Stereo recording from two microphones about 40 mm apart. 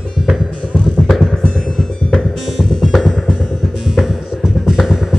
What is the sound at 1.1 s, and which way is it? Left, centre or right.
Music, centre.